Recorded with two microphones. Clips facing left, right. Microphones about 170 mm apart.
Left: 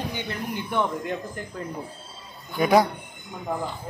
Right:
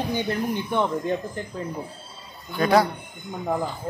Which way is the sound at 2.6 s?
15° left (ahead or behind).